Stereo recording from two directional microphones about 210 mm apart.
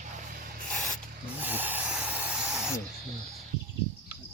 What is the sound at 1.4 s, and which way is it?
Hiss, 10° right (ahead or behind).